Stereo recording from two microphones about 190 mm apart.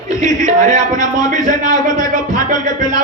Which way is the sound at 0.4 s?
45° right (ahead or behind).